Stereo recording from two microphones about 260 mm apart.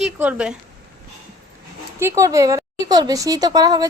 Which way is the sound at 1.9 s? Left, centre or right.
Centre.